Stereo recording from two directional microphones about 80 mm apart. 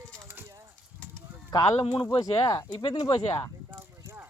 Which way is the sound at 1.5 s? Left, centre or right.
Left.